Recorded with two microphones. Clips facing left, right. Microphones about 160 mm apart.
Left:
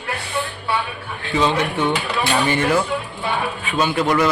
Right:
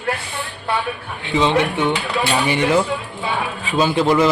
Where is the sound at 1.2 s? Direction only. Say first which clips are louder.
Right 2 dB; 20° right (ahead or behind).